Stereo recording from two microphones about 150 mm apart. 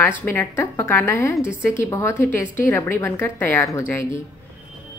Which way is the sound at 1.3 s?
10° right (ahead or behind).